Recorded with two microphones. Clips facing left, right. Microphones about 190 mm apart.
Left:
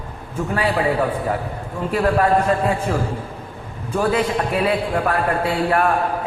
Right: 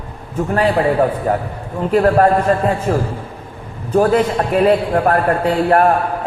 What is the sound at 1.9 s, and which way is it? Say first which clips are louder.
A man's voice: right 5 dB; 45° right (ahead or behind).